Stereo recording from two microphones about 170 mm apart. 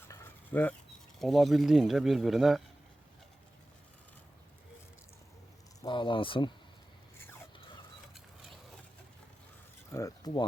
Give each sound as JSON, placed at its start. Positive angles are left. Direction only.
{"t": 0.1, "sound": "dog", "side_deg": 15}
{"t": 1.2, "sound": "speech", "side_deg": 0}
{"t": 5.8, "sound": "speech", "side_deg": 30}
{"t": 9.9, "sound": "speech", "side_deg": 20}